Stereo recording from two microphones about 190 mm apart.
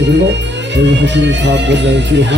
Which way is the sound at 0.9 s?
65° right (ahead or behind).